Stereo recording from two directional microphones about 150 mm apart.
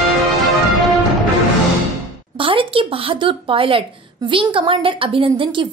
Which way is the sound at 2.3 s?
35° right (ahead or behind).